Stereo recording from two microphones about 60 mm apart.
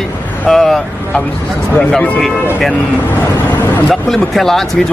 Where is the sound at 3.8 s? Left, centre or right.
Centre.